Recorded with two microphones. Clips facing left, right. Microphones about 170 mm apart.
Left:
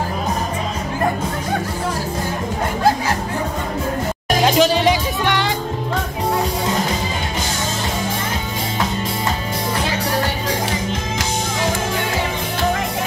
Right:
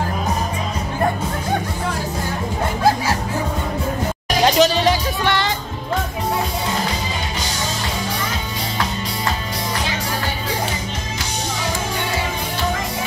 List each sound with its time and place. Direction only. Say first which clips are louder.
4.5 s music: even; 10° left (ahead or behind)